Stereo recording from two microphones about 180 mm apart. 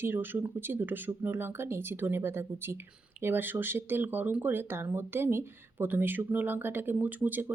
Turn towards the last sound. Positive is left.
turn(degrees=-10)  # may be behind; listen again after turning